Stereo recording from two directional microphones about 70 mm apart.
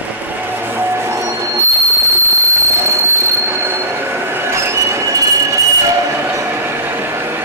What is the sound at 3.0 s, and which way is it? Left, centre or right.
Train wheels squealing, right.